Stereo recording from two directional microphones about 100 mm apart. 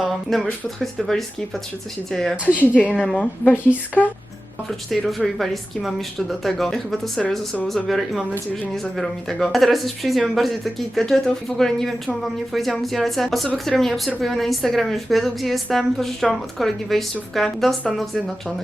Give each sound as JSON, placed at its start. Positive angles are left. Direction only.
{"t": 0.0, "sound": "a woman's voice", "side_deg": 0}
{"t": 4.9, "sound": "speech", "side_deg": 0}
{"t": 7.9, "sound": "speech", "side_deg": 0}